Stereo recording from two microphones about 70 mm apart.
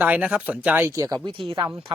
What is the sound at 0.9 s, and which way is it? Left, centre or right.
Speech, right.